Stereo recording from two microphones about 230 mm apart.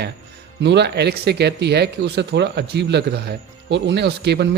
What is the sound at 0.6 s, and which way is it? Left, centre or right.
Speech, right.